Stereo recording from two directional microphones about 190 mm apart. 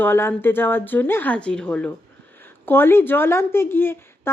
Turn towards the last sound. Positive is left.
turn(degrees=10)  # may be behind; listen again after turning